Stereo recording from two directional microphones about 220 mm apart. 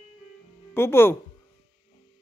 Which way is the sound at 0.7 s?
10° left (ahead or behind).